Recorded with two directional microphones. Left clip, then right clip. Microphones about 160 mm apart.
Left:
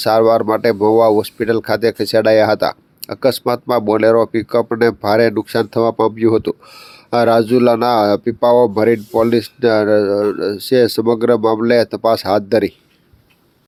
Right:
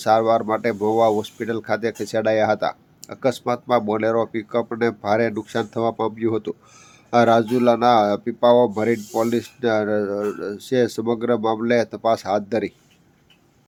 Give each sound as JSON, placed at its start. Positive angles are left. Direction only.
{"t": 0.0, "sound": "speech", "side_deg": 35}